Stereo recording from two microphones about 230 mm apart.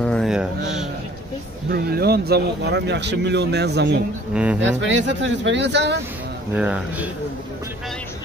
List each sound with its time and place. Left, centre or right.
0.0 s speech: centre
1.7 s speech: right
4.3 s speech: centre
4.6 s speech: right
6.5 s speech: centre